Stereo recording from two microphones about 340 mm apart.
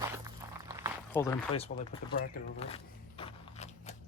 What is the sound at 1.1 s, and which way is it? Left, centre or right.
Speech, centre.